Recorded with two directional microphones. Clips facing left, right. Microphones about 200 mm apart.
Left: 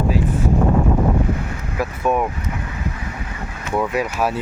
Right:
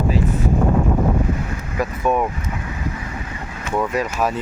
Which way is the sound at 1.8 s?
5° left (ahead or behind).